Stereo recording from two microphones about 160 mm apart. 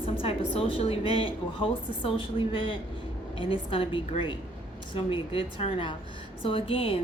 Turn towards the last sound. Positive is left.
turn(degrees=35)  # may be behind; listen again after turning